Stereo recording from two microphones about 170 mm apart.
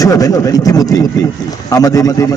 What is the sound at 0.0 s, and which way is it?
A man's voice, 20° left (ahead or behind).